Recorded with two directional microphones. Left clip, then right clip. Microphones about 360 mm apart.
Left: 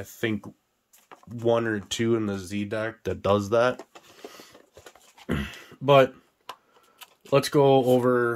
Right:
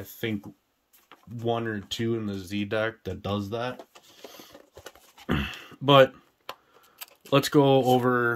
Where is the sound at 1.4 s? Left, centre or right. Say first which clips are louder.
Left 5 dB; centre.